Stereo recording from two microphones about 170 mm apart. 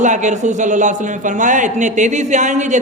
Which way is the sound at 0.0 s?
45° right (ahead or behind).